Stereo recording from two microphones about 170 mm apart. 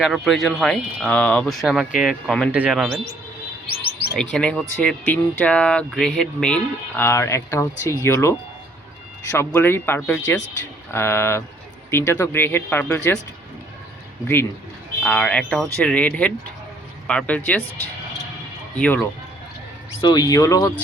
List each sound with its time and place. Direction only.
0.0 s speech: centre (ahead or behind)
3.8 s chirp: 70° left (ahead or behind)
4.2 s speech: 5° left (ahead or behind)
15.0 s speech: 5° left (ahead or behind)
18.8 s speech: 5° left (ahead or behind)
20.0 s speech: 25° left (ahead or behind)